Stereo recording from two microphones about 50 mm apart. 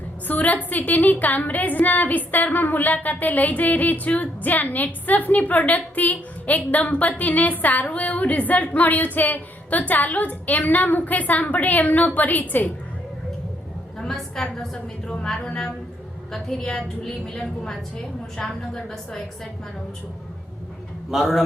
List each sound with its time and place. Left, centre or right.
0.3 s a woman's voice: left
14.0 s a sound: centre
14.5 s a woman's voice: centre
15.1 s a woman's voice: centre
21.1 s a man's voice: centre